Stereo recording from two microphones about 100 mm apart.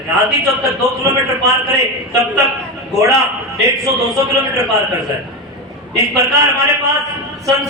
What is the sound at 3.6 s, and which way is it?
Speech, 35° right (ahead or behind).